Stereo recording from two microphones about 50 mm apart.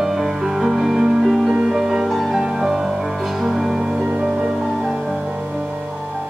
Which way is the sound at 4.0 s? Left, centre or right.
Right.